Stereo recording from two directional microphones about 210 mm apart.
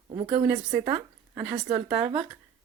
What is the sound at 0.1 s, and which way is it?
Speech, 25° right (ahead or behind).